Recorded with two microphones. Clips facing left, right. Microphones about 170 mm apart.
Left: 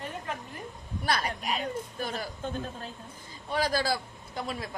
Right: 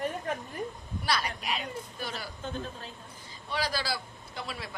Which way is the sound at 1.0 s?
45° left (ahead or behind).